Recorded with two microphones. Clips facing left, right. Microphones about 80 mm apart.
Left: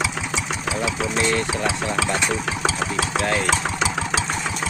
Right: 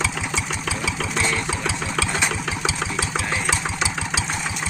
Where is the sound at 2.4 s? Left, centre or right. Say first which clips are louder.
Left 2 dB; left.